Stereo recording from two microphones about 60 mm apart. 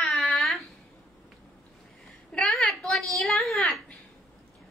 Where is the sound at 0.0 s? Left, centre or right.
Centre.